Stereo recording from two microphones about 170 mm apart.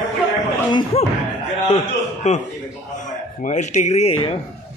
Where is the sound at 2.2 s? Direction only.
40° left (ahead or behind).